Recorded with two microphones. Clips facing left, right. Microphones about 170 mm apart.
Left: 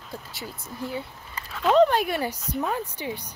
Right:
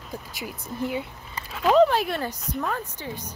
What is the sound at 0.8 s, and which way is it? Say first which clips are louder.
Speech: right 4 dB; 15° right (ahead or behind).